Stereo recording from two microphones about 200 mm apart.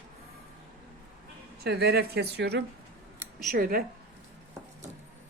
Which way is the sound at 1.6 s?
55° right (ahead or behind).